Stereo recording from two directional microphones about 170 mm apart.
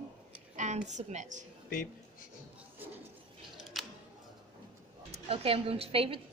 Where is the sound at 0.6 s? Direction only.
45° right (ahead or behind).